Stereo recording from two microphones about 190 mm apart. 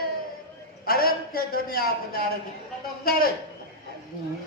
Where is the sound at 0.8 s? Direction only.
50° left (ahead or behind).